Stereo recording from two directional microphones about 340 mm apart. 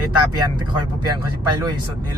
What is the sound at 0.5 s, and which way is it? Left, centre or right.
Speech, centre.